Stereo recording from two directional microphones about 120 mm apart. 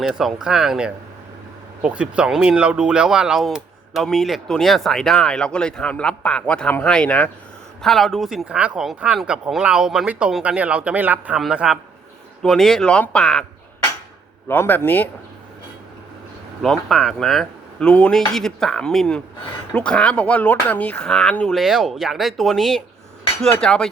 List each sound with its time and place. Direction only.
0.0 s speech: 5° right (ahead or behind)
14.4 s speech: 20° left (ahead or behind)
16.6 s speech: centre (ahead or behind)